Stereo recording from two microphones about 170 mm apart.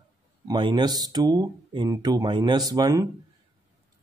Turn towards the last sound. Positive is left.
turn(degrees=-20)  # may be behind; listen again after turning